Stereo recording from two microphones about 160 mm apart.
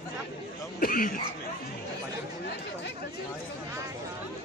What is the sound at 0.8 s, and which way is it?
Speech, 60° left (ahead or behind).